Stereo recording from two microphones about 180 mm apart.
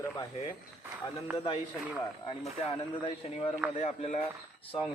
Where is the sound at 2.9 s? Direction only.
25° left (ahead or behind).